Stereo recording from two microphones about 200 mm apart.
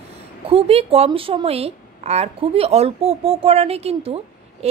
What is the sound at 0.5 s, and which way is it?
A woman's voice, 30° right (ahead or behind).